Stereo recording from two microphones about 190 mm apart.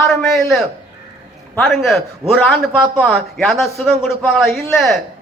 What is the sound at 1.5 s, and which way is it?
A man's voice, 5° left (ahead or behind).